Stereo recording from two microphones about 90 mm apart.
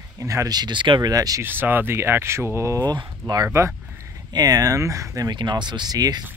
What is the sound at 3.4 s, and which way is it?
Speech, 30° right (ahead or behind).